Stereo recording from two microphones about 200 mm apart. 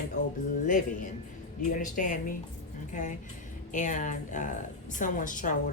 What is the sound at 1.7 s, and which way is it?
Speech, 40° left (ahead or behind).